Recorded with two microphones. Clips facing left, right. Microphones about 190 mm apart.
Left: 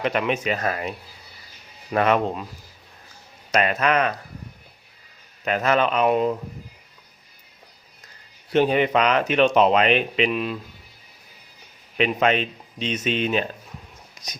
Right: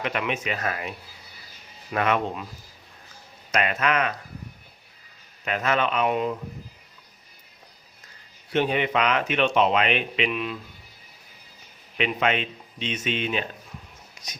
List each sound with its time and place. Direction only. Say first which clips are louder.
0.0 s speech: left 5 dB; 35° left (ahead or behind)
3.5 s speech: left 4 dB; 35° left (ahead or behind)
5.5 s speech: left 4 dB; 40° left (ahead or behind)
8.5 s speech: left 5 dB; 40° left (ahead or behind)
11.9 s speech: left 4 dB; 40° left (ahead or behind)